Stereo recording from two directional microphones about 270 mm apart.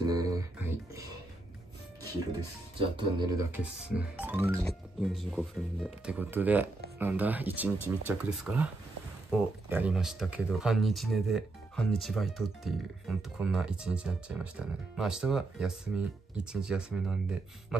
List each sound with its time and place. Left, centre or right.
0.0 s music: centre
3.0 s speech: centre
3.9 s speech: centre